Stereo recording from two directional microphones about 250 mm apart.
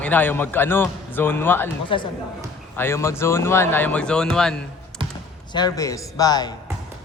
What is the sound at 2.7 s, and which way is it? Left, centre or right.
A man's voice, centre.